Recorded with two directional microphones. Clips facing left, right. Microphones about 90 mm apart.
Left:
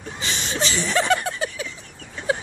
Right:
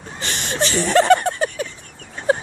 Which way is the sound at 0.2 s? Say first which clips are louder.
Right 3 dB; 55° right (ahead or behind).